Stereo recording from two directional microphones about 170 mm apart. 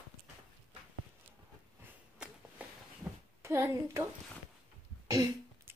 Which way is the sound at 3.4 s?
15° right (ahead or behind).